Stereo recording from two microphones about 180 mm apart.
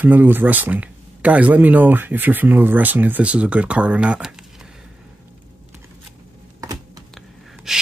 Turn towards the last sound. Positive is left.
turn(degrees=0)  # may be behind; listen again after turning